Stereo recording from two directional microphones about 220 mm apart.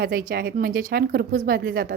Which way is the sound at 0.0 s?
40° right (ahead or behind).